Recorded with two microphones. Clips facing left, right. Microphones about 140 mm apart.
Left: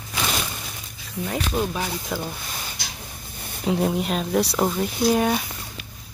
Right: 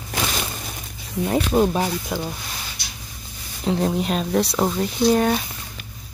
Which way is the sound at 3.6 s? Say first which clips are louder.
Right 1 dB; 5° left (ahead or behind).